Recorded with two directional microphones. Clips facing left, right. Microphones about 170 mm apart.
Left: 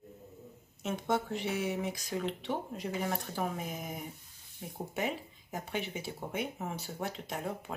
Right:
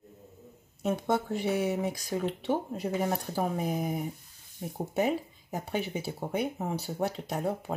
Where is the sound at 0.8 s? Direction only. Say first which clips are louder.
Right 4 dB; 35° right (ahead or behind).